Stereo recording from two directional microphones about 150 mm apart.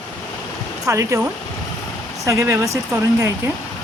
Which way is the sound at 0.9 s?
20° right (ahead or behind).